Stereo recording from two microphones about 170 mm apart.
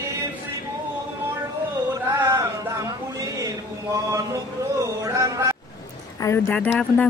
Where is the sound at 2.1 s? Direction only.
15° right (ahead or behind).